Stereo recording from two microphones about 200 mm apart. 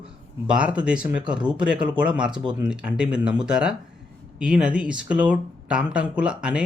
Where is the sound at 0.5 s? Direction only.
5° right (ahead or behind).